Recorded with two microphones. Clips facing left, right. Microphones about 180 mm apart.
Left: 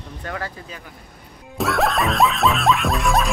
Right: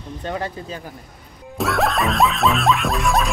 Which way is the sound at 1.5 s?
Centre (ahead or behind).